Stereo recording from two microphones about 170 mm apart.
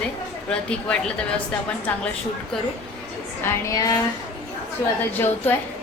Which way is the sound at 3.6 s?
20° left (ahead or behind).